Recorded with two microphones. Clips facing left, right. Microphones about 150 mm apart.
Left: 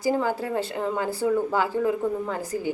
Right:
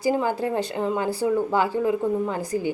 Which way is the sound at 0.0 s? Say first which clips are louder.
Right 2 dB; 15° right (ahead or behind).